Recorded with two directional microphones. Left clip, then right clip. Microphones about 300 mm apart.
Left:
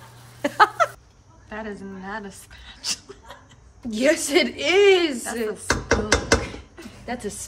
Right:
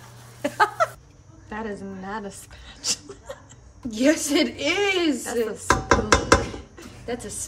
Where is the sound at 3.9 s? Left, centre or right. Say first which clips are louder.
Left 1 dB; left.